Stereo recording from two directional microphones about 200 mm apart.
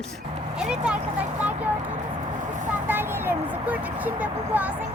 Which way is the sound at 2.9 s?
10° right (ahead or behind).